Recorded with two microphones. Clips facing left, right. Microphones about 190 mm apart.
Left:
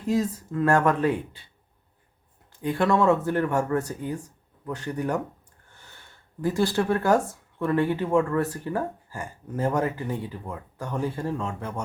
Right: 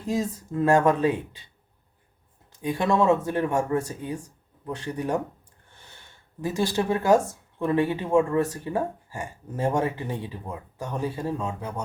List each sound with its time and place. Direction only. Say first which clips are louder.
0.1 s speech: left 2 dB; 15° right (ahead or behind)
2.6 s speech: left 1 dB; 15° right (ahead or behind)
6.4 s speech: left 2 dB; 20° right (ahead or behind)